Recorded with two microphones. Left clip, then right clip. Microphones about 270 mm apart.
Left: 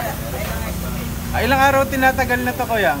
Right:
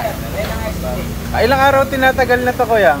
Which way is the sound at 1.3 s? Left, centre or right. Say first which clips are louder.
Right 4 dB; centre.